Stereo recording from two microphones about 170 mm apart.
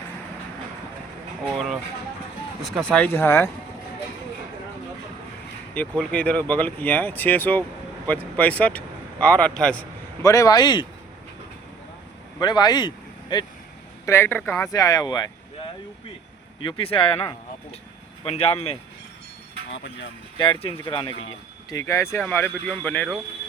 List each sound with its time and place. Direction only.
1.5 s speech: centre (ahead or behind); by 3.5 s 15° left (ahead or behind)
6.0 s speech: 5° left (ahead or behind)
10.2 s speech: 20° left (ahead or behind)
12.4 s speech: 25° left (ahead or behind)
14.0 s speech: 15° left (ahead or behind)
16.6 s speech: 30° left (ahead or behind)
19.7 s speech: 90° left
20.3 s speech: 30° left (ahead or behind); by 23.0 s 10° left (ahead or behind)